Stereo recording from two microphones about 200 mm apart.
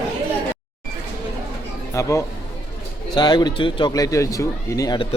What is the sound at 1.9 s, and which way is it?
Speech, 15° left (ahead or behind).